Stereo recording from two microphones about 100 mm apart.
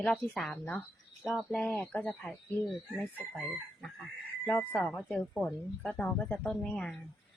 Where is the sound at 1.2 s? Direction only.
5° right (ahead or behind).